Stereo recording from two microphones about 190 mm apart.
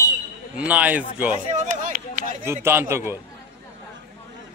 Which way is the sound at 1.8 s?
45° right (ahead or behind).